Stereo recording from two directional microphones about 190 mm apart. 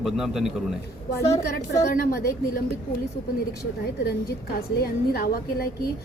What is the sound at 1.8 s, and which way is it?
Speech, 50° left (ahead or behind).